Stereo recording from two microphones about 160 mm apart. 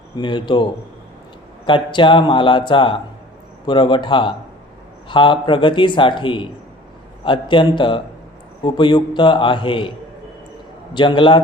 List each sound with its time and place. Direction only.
0.2 s a man's voice: 30° left (ahead or behind)
10.9 s a man's voice: 30° left (ahead or behind)